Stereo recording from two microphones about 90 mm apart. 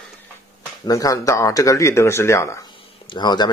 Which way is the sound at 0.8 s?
40° left (ahead or behind).